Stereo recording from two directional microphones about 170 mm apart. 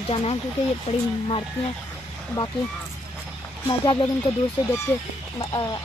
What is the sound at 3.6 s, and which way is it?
Speech, 25° left (ahead or behind).